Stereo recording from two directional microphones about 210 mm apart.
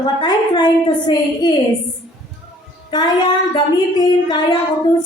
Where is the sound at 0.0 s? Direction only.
20° left (ahead or behind).